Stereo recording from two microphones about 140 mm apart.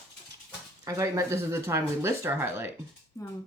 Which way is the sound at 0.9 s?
20° right (ahead or behind).